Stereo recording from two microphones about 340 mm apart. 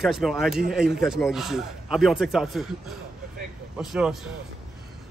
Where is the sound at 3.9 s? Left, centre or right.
Centre.